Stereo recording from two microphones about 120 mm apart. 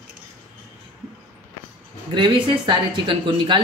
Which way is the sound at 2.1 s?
40° right (ahead or behind).